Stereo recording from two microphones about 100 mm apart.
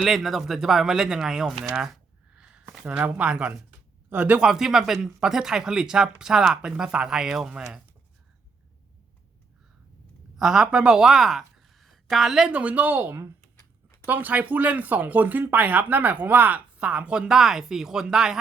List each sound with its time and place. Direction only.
0.0 s speech: centre (ahead or behind)
1.7 s a sound: 5° right (ahead or behind)
2.7 s speech: 10° right (ahead or behind)
10.3 s a woman's voice: 5° right (ahead or behind); by 13.3 s 20° right (ahead or behind)
13.6 s a sound: 30° left (ahead or behind)
14.1 s speech: 15° right (ahead or behind)